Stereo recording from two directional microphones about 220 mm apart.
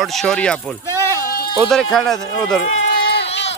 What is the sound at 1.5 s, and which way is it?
Speech, centre (ahead or behind).